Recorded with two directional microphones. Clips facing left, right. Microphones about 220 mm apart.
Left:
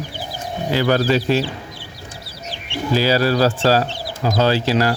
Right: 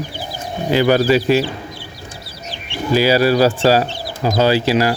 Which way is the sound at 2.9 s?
10° right (ahead or behind).